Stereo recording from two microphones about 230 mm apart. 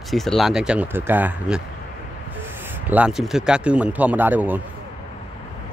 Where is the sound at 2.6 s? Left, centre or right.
Centre.